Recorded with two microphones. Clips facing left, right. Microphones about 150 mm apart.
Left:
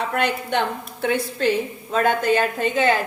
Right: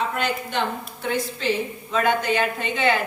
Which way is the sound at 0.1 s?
60° left (ahead or behind).